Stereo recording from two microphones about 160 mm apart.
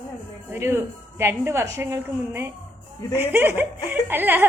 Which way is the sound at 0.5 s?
15° right (ahead or behind).